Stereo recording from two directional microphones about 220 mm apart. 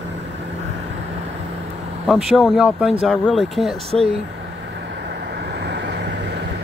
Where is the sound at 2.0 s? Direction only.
Centre (ahead or behind).